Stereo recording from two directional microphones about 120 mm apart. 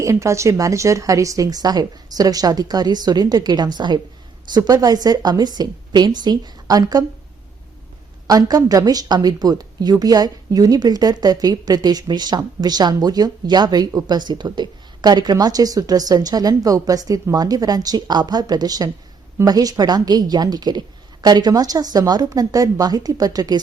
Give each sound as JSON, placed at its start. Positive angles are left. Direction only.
{"t": 0.0, "sound": "a woman's voice", "side_deg": -25}
{"t": 8.3, "sound": "a woman's voice", "side_deg": -30}